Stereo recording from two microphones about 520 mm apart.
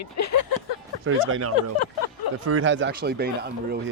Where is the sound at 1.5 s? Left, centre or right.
Left.